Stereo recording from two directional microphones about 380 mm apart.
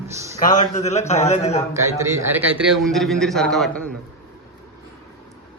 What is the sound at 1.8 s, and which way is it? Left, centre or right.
A man's voice, centre.